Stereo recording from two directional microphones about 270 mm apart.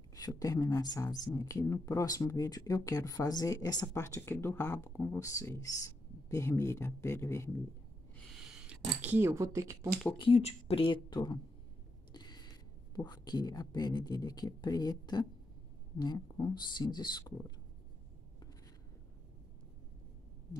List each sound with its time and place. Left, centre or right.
0.1 s speech: centre
8.4 s speech: centre
10.1 s speech: centre
12.1 s a sound: centre
12.9 s speech: centre